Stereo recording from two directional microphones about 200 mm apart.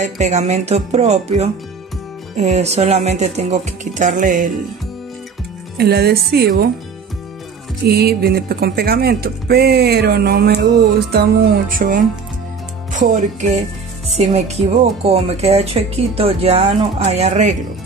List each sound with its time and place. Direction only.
0.0 s speech: 35° right (ahead or behind)
5.8 s speech: 55° right (ahead or behind)
7.8 s speech: 50° right (ahead or behind)